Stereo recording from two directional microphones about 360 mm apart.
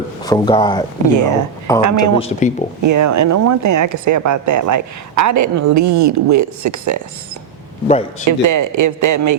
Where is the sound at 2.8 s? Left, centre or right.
Right.